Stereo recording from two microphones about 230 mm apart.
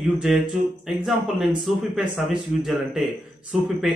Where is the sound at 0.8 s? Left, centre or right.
Centre.